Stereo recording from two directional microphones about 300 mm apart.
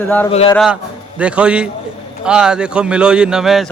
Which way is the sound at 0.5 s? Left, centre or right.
Centre.